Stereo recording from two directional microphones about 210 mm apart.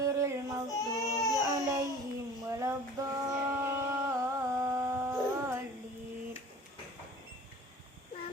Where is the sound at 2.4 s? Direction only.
15° right (ahead or behind).